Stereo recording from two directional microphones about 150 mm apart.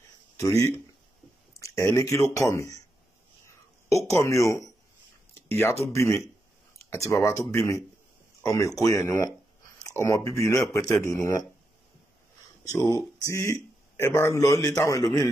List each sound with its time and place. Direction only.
0.4 s a man's voice: 20° left (ahead or behind)
3.4 s a sound: 20° left (ahead or behind)
5.5 s a man's voice: 15° left (ahead or behind)
12.7 s a man's voice: 25° left (ahead or behind)